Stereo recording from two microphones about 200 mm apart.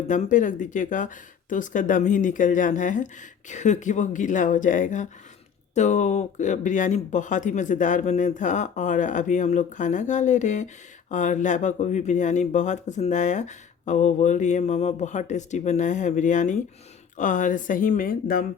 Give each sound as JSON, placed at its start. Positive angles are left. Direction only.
{"t": 0.1, "sound": "speech", "side_deg": 40}